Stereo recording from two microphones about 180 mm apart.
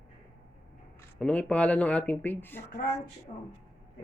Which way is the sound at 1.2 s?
5° left (ahead or behind).